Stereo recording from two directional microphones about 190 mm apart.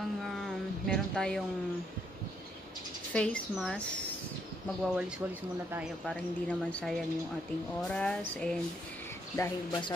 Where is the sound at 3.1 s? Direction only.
5° left (ahead or behind).